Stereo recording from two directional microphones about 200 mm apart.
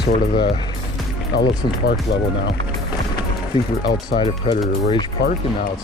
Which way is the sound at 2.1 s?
60° left (ahead or behind).